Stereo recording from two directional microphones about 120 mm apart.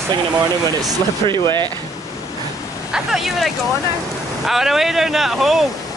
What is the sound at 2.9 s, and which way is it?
Speech, centre (ahead or behind).